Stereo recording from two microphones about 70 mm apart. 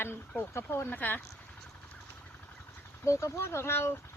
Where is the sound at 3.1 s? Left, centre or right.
Left.